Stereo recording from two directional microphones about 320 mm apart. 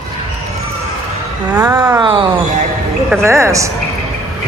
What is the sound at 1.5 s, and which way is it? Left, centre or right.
Speech, centre.